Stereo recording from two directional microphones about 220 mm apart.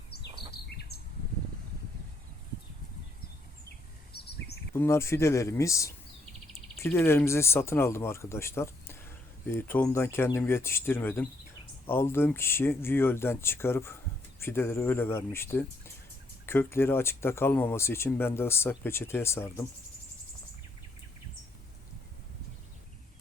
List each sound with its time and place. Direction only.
0.5 s bird: 45° left (ahead or behind)
4.1 s bird: 45° left (ahead or behind)
4.7 s speech: 10° left (ahead or behind)